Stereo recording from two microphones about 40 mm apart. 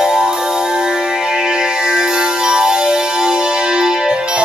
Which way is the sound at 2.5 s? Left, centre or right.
Centre.